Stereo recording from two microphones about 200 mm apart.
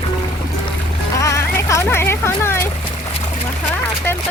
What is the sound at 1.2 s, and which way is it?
Music, 15° left (ahead or behind).